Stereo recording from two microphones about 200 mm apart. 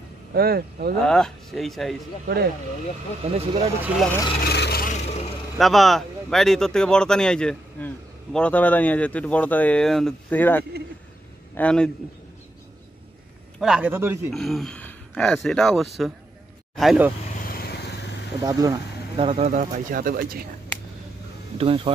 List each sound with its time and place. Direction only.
0.3 s speech: 50° right (ahead or behind)
1.0 s speech: 5° left (ahead or behind)
2.2 s speech: 50° right (ahead or behind)
3.2 s speech: 30° right (ahead or behind)
4.4 s speech: 55° left (ahead or behind)
5.0 s speech: 30° left (ahead or behind)
5.6 s speech: centre (ahead or behind)
13.6 s a man's voice: 5° right (ahead or behind)
14.3 s speech: centre (ahead or behind)
17.5 s vehicle: 50° left (ahead or behind)
18.4 s a man's voice: 20° right (ahead or behind)
19.1 s speech: 30° right (ahead or behind); by 20.4 s 45° right (ahead or behind)
21.5 s speech: 25° right (ahead or behind)